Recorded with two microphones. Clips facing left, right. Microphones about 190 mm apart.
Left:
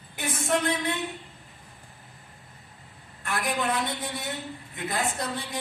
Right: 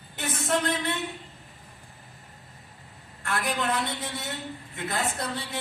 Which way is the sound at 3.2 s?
15° left (ahead or behind).